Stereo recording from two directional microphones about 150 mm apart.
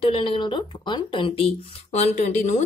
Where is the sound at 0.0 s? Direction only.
35° left (ahead or behind).